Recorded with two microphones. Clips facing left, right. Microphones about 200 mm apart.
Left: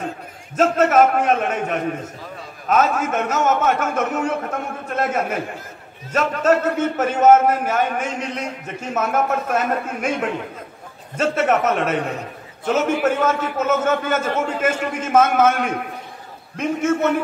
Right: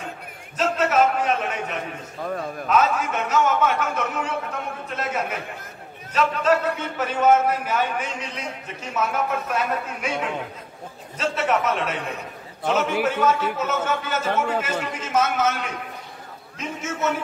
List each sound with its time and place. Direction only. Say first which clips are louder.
0.6 s a man's voice: left 5 dB; 50° left (ahead or behind)